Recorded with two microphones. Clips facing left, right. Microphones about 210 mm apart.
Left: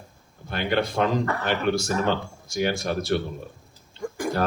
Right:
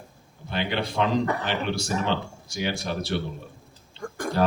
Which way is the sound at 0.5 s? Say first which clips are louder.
Left 3 dB; 50° left (ahead or behind).